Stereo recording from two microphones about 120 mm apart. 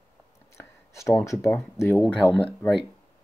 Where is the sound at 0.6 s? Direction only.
25° left (ahead or behind).